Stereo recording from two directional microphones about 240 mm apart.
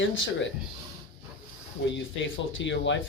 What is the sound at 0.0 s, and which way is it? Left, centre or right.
Speech, left.